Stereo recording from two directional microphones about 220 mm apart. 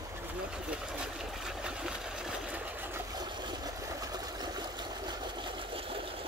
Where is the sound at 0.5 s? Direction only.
5° right (ahead or behind).